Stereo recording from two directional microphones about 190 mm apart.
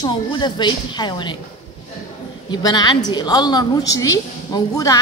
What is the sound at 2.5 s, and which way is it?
A woman's voice, 20° left (ahead or behind).